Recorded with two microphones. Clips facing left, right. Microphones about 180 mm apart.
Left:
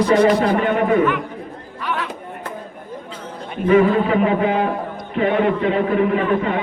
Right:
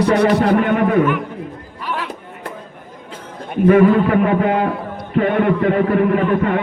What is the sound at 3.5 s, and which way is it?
Speech, 55° right (ahead or behind).